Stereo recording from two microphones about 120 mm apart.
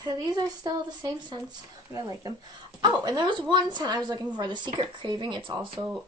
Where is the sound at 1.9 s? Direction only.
30° right (ahead or behind).